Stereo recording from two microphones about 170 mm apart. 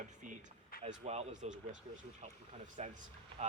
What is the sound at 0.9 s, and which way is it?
Speech, 40° right (ahead or behind).